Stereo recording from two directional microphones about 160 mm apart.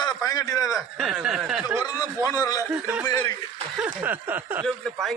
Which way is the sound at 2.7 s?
10° right (ahead or behind).